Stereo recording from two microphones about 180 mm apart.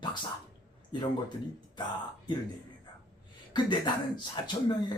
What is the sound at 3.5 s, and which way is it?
Speech, 25° left (ahead or behind).